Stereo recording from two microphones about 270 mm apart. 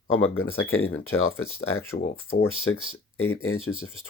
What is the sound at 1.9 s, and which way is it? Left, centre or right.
Speech, left.